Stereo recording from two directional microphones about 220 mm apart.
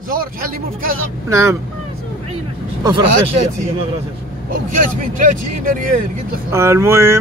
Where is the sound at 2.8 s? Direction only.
20° right (ahead or behind).